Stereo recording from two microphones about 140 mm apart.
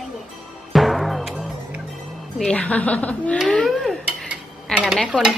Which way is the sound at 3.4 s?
Centre (ahead or behind).